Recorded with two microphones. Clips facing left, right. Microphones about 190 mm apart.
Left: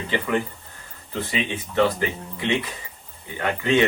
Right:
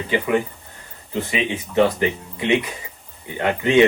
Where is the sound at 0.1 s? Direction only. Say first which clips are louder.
Right 4 dB; 15° right (ahead or behind).